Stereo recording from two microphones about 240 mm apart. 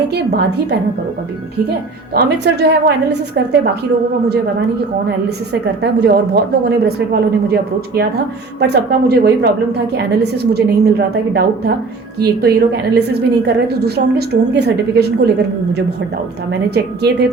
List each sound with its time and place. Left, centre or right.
0.1 s a woman's voice: right
2.4 s a woman's voice: right
5.8 s a woman's voice: right